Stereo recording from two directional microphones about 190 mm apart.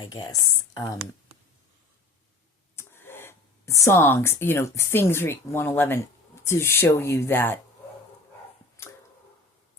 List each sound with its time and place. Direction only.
0.1 s speech: 20° left (ahead or behind)
2.7 s speech: 10° left (ahead or behind)